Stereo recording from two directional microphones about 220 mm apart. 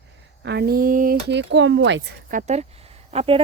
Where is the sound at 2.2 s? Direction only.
35° right (ahead or behind).